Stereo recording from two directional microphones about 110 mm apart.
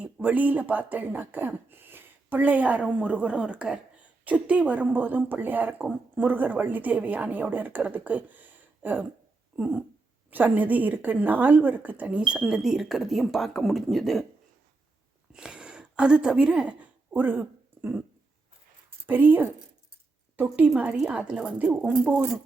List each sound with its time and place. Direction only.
0.0 s speech: 15° right (ahead or behind); by 14.3 s centre (ahead or behind)
15.3 s a woman's voice: 10° right (ahead or behind)
19.0 s a woman's voice: 15° right (ahead or behind)